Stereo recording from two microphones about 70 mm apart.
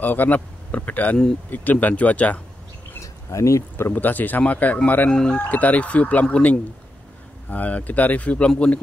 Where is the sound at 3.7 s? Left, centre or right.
Left.